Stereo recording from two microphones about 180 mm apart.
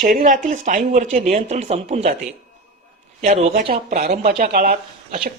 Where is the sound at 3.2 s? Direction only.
45° right (ahead or behind).